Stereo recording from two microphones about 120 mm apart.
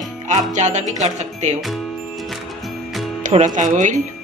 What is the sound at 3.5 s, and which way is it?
Speech, 90° right.